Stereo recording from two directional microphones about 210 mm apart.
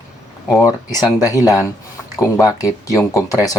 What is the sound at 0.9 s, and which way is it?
Speech, 15° left (ahead or behind).